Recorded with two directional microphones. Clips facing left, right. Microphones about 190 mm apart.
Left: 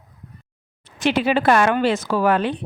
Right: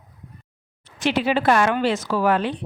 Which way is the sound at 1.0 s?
55° left (ahead or behind).